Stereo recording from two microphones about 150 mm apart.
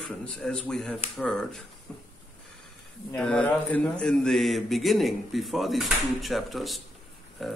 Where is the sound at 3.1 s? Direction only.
5° left (ahead or behind).